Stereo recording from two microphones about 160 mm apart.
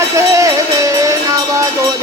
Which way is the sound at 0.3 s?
20° right (ahead or behind).